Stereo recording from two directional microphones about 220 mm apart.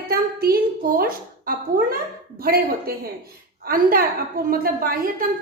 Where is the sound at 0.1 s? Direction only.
45° right (ahead or behind).